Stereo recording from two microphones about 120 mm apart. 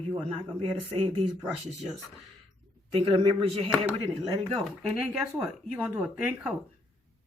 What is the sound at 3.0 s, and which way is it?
Speech, 45° right (ahead or behind).